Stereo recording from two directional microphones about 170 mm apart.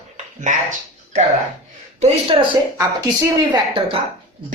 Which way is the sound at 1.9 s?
35° right (ahead or behind).